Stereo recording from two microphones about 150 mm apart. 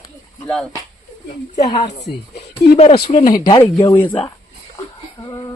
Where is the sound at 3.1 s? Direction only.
55° left (ahead or behind).